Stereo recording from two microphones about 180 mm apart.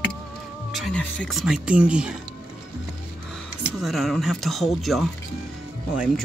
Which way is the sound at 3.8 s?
Centre (ahead or behind).